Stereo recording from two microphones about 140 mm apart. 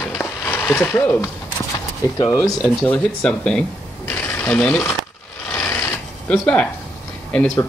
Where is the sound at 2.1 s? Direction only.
25° left (ahead or behind).